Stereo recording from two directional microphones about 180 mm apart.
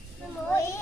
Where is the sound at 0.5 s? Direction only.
15° left (ahead or behind).